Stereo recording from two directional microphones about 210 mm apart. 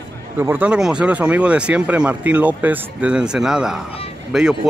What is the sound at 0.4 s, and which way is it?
Speech, 10° right (ahead or behind).